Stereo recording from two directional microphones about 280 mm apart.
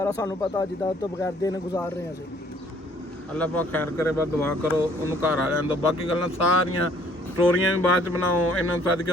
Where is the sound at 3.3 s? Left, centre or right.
Centre.